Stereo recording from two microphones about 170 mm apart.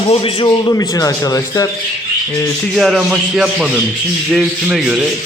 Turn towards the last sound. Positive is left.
turn(degrees=0)  # may be behind; listen again after turning